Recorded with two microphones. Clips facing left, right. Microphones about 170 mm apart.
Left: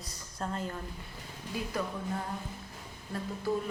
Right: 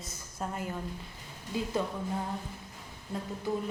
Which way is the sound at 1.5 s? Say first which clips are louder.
Right 3 dB; 25° right (ahead or behind).